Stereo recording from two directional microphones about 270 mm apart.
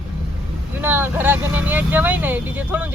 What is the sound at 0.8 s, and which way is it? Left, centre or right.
Speech, centre.